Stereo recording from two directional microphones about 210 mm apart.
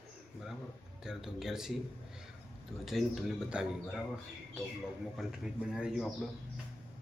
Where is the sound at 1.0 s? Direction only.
Centre (ahead or behind).